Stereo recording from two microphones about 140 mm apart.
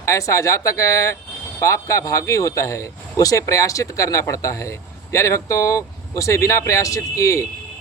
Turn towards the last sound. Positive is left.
turn(degrees=20)  # may be behind; listen again after turning